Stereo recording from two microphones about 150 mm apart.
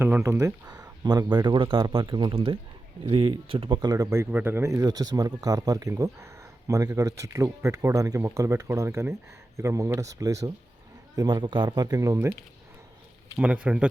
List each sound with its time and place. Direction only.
0.0 s speech: 15° right (ahead or behind)
13.3 s speech: 10° right (ahead or behind)